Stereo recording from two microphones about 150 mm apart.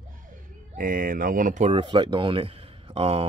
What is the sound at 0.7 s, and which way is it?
Speech, 70° right (ahead or behind).